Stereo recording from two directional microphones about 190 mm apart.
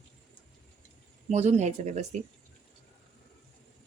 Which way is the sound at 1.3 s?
35° right (ahead or behind).